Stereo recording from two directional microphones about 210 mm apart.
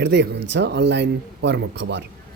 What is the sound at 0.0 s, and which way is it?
Speech, 55° right (ahead or behind).